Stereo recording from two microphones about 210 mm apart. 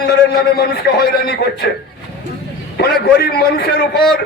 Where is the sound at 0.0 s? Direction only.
50° left (ahead or behind).